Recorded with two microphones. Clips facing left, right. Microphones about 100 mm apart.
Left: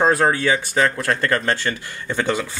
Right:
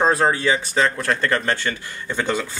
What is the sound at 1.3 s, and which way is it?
Speech, 35° left (ahead or behind).